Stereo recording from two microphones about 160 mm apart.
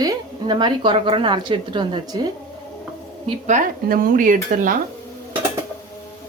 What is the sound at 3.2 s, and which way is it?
Speech, 45° right (ahead or behind).